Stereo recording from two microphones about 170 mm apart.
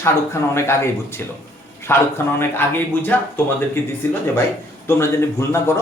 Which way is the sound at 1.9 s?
15° left (ahead or behind).